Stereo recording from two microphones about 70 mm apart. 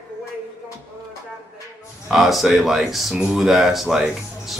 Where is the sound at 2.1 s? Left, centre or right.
Centre.